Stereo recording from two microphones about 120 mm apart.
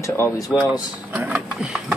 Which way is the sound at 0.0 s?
25° left (ahead or behind).